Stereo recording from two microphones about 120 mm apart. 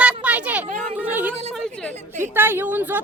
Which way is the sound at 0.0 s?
10° right (ahead or behind).